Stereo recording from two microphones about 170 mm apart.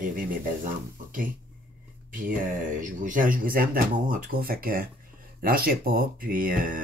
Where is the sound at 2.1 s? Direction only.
50° right (ahead or behind).